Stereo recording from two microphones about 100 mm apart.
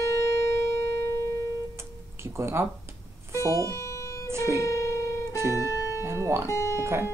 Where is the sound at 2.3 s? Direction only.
25° right (ahead or behind).